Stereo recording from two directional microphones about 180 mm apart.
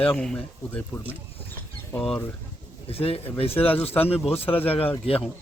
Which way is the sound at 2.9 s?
30° left (ahead or behind).